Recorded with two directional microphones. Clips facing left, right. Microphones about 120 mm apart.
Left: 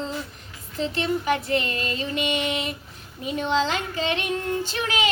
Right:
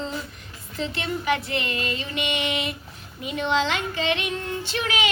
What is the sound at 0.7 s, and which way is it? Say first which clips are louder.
Child singing: left 3 dB; 35° left (ahead or behind).